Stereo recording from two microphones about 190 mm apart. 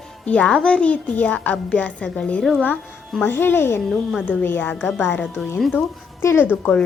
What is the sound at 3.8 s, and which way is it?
Speech, centre (ahead or behind).